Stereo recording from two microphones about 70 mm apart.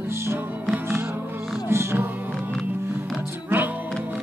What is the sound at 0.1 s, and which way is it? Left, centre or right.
Music, right.